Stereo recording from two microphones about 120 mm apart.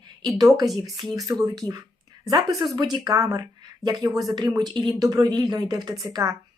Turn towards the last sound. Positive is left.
turn(degrees=-25)  # may be behind; listen again after turning